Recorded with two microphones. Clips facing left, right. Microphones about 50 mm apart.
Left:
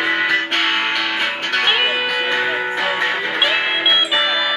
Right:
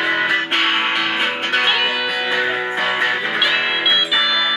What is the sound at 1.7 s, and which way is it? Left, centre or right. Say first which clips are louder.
Music: left 1 dB; centre.